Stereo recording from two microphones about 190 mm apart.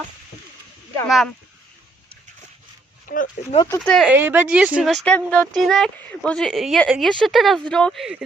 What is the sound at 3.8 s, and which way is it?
Speech, 5° left (ahead or behind).